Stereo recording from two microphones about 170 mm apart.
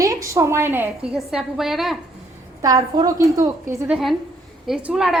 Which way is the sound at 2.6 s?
20° right (ahead or behind).